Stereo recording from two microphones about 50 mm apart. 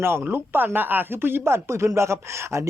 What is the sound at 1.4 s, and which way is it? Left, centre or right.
Speech, right.